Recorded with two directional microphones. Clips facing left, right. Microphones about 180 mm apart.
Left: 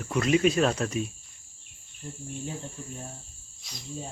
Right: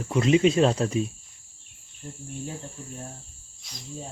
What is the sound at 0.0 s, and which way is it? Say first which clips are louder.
Speech: right 3 dB; 25° right (ahead or behind).